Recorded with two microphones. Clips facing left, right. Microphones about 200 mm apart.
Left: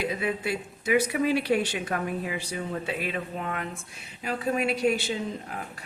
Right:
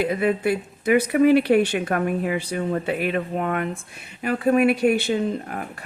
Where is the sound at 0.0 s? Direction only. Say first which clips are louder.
Right 8 dB; 55° right (ahead or behind).